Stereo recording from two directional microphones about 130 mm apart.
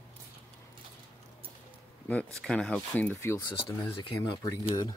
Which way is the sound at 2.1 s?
10° left (ahead or behind).